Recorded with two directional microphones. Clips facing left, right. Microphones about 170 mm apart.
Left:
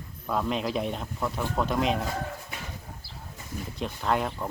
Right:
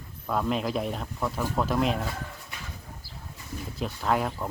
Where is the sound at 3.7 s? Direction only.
Centre (ahead or behind).